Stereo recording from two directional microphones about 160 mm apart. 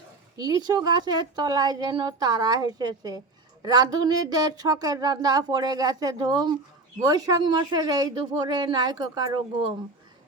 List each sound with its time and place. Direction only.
0.3 s a woman's voice: 25° right (ahead or behind)